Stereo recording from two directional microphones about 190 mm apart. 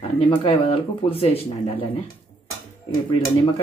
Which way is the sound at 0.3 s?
30° left (ahead or behind).